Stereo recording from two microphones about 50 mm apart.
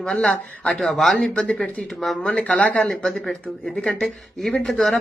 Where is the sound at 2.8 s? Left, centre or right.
Centre.